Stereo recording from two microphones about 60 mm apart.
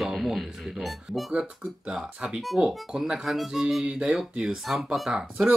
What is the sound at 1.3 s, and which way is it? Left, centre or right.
Speech, centre.